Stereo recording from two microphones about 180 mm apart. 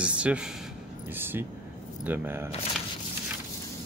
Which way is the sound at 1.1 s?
10° right (ahead or behind).